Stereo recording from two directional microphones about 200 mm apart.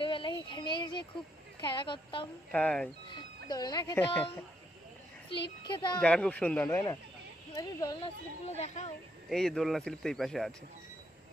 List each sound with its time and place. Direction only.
0.0 s child singing: 25° left (ahead or behind)
1.6 s a woman's voice: 25° left (ahead or behind)
2.5 s speech: 5° left (ahead or behind)
3.4 s a woman's voice: 20° left (ahead or behind)
5.3 s a woman's voice: 25° left (ahead or behind)
5.9 s a woman's voice: 5° left (ahead or behind)
8.5 s speech: 35° left (ahead or behind)
9.3 s speech: centre (ahead or behind)